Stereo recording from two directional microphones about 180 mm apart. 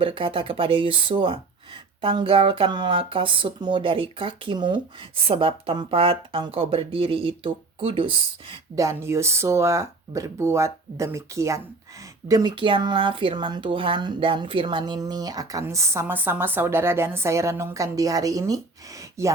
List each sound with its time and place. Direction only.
0.0 s speech: 30° right (ahead or behind)
8.8 s speech: 15° right (ahead or behind)